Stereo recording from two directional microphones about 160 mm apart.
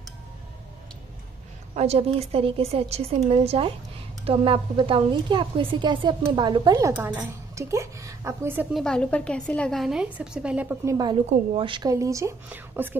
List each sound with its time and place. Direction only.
1.8 s a woman's voice: 40° right (ahead or behind); by 8.6 s 15° right (ahead or behind)
8.7 s a woman's voice: 5° left (ahead or behind)
11.5 s a woman's voice: 30° right (ahead or behind); by 12.9 s 10° right (ahead or behind)